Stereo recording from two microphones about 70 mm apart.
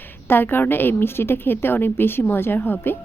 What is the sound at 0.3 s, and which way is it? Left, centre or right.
A woman's voice, left.